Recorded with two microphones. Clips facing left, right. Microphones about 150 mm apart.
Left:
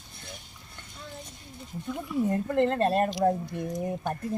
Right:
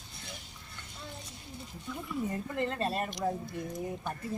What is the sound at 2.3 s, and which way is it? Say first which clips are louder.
Speech: left 11 dB; 60° left (ahead or behind).